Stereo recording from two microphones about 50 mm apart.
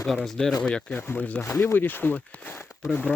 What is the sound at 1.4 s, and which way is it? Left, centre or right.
Speech, left.